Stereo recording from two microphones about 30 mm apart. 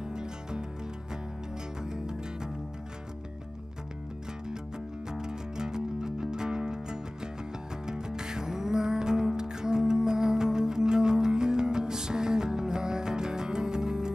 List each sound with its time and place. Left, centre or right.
0.1 s music: right
1.9 s music: right
5.1 s music: right